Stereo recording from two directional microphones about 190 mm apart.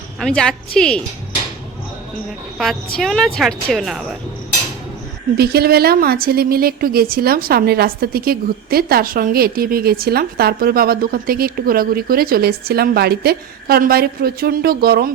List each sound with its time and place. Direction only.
0.2 s speech: 5° left (ahead or behind)
3.0 s speech: centre (ahead or behind)
5.4 s a woman's voice: 55° right (ahead or behind)